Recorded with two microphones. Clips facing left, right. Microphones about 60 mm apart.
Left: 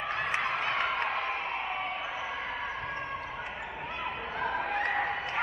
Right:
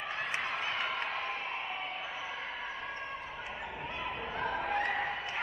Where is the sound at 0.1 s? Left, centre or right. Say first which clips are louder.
Left 5 dB; left.